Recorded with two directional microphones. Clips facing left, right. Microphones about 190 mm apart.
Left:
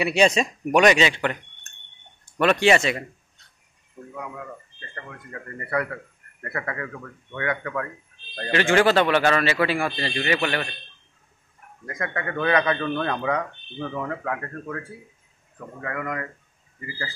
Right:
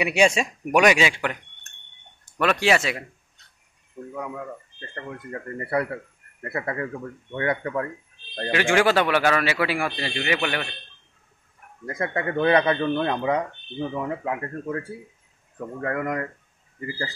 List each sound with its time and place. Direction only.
0.0 s a man's voice: 10° right (ahead or behind)
4.9 s a man's voice: 30° right (ahead or behind)
8.5 s a man's voice: 10° right (ahead or behind)
11.8 s a man's voice: 30° right (ahead or behind)
15.8 s speech: 40° right (ahead or behind)